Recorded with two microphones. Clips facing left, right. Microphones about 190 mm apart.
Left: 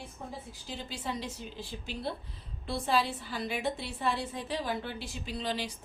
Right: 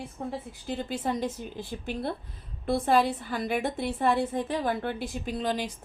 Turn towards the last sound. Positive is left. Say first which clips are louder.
# right 5 dB
turn(degrees=-50)  # may be behind; listen again after turning